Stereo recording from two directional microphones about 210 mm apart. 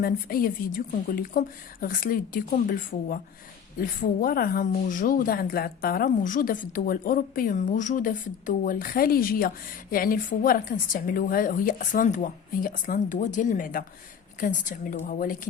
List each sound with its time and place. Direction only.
0.0 s a woman's voice: 45° left (ahead or behind)